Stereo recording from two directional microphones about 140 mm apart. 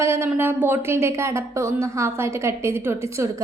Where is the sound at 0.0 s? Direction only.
20° right (ahead or behind).